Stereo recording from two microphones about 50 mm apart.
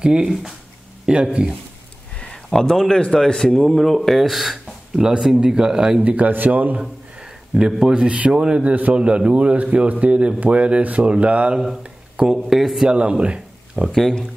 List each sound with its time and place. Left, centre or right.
0.0 s a man's voice: centre
0.3 s a man's voice: centre
1.0 s a man's voice: centre
2.3 s a man's voice: centre
6.0 s speech: right
6.8 s a man's voice: centre
12.4 s a man's voice: centre
12.8 s speech: centre
13.9 s a man's voice: centre